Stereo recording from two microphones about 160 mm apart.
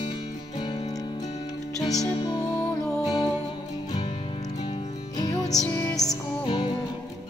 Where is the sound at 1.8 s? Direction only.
25° left (ahead or behind).